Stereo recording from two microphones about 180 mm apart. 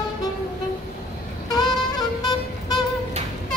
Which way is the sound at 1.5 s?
20° left (ahead or behind).